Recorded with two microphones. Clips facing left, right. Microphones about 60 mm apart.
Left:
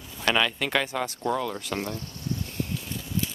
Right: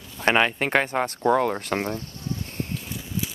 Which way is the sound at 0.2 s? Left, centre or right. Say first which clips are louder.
Right 4 dB; right.